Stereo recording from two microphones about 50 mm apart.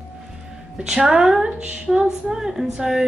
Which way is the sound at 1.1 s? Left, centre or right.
Centre.